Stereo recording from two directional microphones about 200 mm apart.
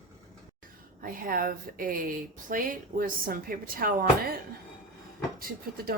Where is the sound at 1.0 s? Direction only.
45° right (ahead or behind).